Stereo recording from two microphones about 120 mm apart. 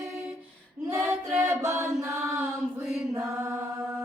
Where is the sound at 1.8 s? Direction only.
25° right (ahead or behind).